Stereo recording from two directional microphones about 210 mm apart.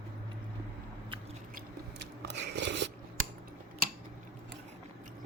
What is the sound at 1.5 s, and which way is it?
Chewing, 55° right (ahead or behind).